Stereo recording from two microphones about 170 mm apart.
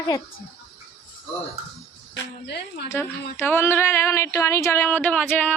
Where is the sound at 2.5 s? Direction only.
80° left.